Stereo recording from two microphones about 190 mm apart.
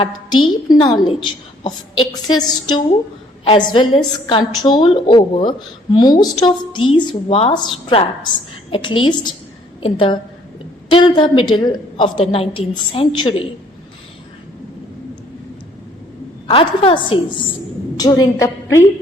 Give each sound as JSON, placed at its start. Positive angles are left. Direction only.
{"t": 0.7, "sound": "a woman's voice", "side_deg": 25}
{"t": 16.5, "sound": "a woman's voice", "side_deg": 30}